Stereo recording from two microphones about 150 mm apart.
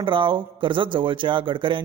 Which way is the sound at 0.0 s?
35° right (ahead or behind).